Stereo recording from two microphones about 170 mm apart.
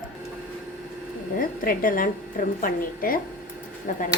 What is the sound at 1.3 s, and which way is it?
A woman's voice, 55° left (ahead or behind).